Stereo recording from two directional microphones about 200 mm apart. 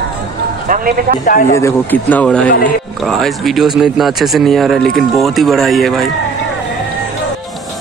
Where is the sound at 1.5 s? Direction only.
10° left (ahead or behind).